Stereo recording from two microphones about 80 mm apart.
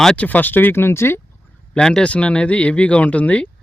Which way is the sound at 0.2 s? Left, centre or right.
Left.